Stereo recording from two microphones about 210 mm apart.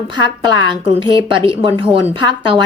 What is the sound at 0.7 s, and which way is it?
Speech, 25° right (ahead or behind).